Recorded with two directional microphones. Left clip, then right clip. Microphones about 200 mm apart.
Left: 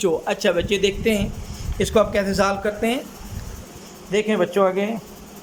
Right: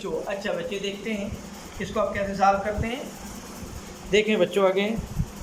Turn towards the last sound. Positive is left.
turn(degrees=5)  # may be behind; listen again after turning